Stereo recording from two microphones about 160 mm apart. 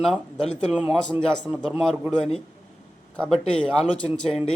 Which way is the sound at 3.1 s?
5° left (ahead or behind).